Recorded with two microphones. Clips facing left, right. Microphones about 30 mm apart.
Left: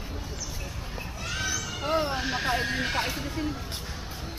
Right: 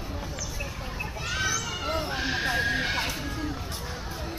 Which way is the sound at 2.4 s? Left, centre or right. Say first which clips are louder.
Right 2 dB; centre.